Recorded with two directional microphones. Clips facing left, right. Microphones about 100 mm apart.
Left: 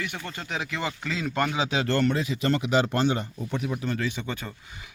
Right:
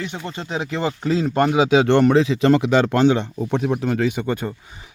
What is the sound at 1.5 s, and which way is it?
Speech, 80° right.